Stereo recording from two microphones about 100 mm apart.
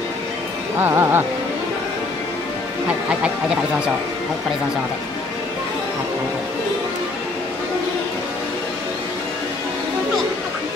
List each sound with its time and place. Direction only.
0.7 s speech: 25° right (ahead or behind)
3.1 s speech: 10° right (ahead or behind)